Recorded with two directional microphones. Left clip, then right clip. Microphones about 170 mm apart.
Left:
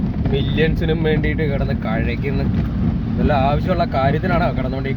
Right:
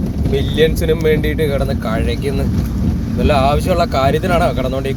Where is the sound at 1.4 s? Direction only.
10° left (ahead or behind).